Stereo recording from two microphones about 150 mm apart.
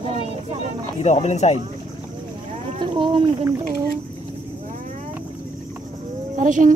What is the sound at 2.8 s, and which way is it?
Speech, 35° right (ahead or behind).